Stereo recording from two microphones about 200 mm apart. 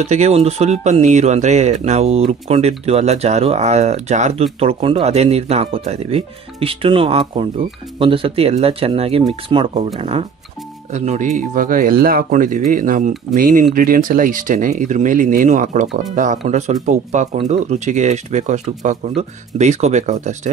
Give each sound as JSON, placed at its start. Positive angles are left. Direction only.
{"t": 0.0, "sound": "speech", "side_deg": -35}